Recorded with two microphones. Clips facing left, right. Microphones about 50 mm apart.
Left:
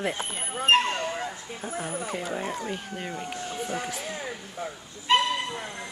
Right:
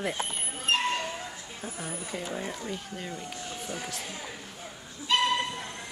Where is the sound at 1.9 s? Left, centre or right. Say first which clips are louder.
Left 5 dB; left.